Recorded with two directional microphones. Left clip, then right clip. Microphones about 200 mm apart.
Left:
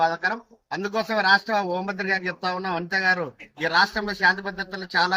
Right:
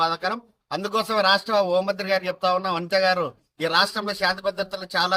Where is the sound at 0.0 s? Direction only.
20° right (ahead or behind).